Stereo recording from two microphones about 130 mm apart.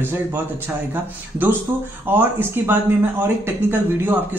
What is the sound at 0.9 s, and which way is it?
Speech, 15° right (ahead or behind).